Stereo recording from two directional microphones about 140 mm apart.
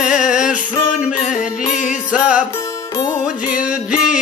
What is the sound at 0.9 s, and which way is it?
Music, 60° left (ahead or behind).